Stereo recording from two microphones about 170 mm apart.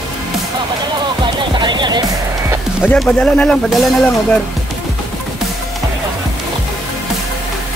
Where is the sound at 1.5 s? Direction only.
25° right (ahead or behind).